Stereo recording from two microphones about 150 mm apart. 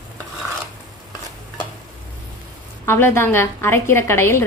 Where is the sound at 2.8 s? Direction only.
15° left (ahead or behind).